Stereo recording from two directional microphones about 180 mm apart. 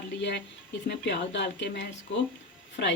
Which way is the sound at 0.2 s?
75° left (ahead or behind).